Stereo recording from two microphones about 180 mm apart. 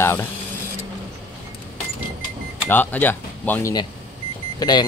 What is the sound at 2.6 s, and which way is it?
Speech, 10° left (ahead or behind).